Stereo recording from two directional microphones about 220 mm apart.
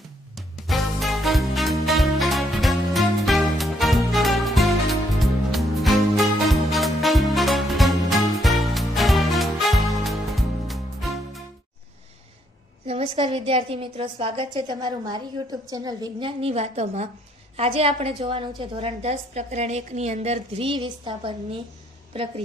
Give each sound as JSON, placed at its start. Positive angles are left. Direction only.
{"t": 0.3, "sound": "music", "side_deg": 0}
{"t": 12.8, "sound": "a woman's voice", "side_deg": -25}